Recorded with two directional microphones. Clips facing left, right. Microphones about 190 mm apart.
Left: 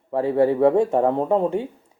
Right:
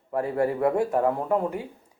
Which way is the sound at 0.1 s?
25° left (ahead or behind).